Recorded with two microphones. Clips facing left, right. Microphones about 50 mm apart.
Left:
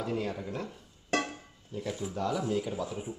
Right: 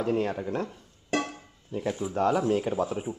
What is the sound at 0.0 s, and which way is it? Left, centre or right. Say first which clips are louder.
Speech: right 6 dB; right.